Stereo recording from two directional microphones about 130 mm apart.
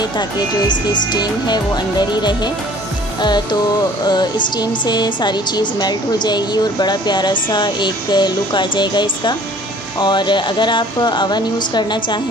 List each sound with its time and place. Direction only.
0.7 s speech: 35° left (ahead or behind)
3.2 s music: 35° left (ahead or behind)
4.1 s speech: 30° left (ahead or behind)